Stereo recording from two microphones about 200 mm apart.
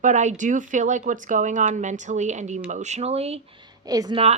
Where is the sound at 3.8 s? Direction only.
20° right (ahead or behind).